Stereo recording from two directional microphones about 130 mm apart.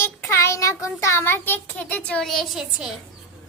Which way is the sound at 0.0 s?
20° left (ahead or behind).